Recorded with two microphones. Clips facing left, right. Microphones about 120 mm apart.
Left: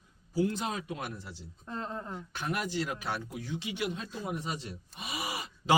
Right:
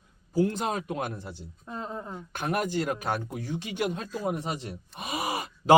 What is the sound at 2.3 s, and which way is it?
Speech, 50° right (ahead or behind).